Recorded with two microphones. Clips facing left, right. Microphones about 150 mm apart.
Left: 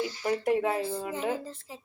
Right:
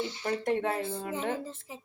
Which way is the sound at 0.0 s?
25° right (ahead or behind).